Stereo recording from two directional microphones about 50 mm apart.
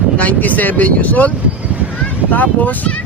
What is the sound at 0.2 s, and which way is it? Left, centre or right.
Speech, left.